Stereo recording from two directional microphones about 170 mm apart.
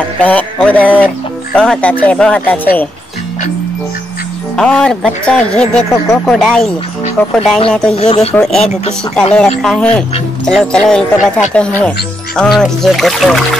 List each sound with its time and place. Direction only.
0.2 s speech: 10° left (ahead or behind)
4.6 s speech: 5° left (ahead or behind)
7.9 s speech: 35° left (ahead or behind)
8.4 s speech: 5° left (ahead or behind)